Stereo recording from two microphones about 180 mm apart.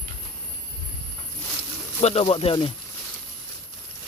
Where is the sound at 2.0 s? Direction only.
35° left (ahead or behind).